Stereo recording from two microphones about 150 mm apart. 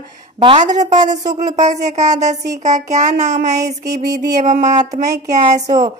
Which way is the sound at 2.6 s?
50° right (ahead or behind).